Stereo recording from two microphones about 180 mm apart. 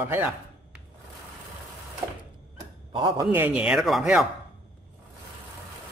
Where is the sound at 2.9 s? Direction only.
25° right (ahead or behind).